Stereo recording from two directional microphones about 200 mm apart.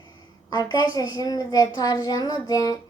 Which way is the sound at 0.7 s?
20° left (ahead or behind).